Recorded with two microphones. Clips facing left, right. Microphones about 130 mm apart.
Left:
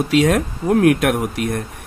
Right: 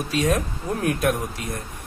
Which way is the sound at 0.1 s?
90° left.